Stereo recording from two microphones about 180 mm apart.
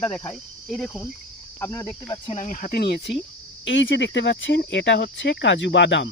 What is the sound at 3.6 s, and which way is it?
Speech, 90° left.